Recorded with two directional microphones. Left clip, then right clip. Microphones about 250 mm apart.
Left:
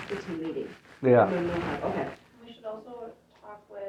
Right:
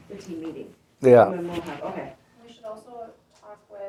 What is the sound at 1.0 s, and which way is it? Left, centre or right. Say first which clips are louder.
Speech: right 6 dB; right.